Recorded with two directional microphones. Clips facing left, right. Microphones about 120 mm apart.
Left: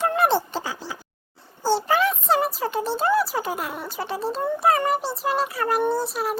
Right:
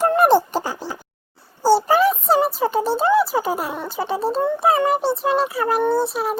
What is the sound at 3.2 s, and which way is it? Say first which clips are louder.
Speech: right 5 dB; centre (ahead or behind).